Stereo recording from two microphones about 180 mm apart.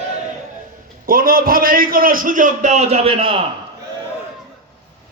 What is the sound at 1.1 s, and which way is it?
A man's voice, 50° right (ahead or behind).